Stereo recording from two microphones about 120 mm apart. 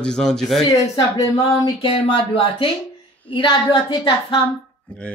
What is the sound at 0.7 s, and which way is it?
Speech, 30° left (ahead or behind).